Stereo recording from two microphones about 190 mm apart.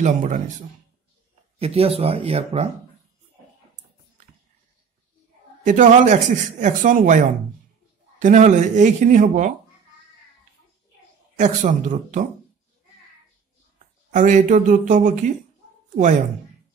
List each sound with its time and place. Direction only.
0.0 s speech: 40° right (ahead or behind)
1.6 s speech: 30° right (ahead or behind)
5.6 s speech: 40° right (ahead or behind)
11.3 s speech: 40° right (ahead or behind)
14.1 s speech: 45° right (ahead or behind)